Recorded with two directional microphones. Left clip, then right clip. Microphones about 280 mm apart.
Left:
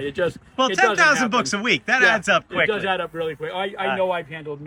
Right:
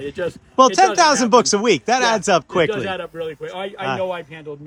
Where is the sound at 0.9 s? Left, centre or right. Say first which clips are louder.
Right 4 dB; centre.